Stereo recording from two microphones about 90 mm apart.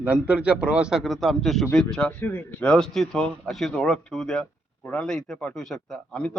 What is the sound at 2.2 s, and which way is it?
A man's voice, 20° left (ahead or behind).